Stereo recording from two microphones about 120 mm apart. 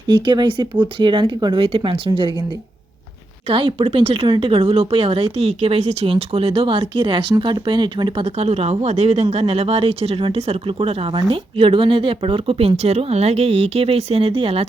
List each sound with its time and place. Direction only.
0.1 s speech: 40° right (ahead or behind)
3.5 s speech: 45° right (ahead or behind)